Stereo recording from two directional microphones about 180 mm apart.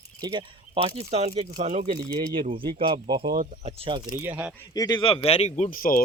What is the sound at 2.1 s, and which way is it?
Speech, 30° right (ahead or behind).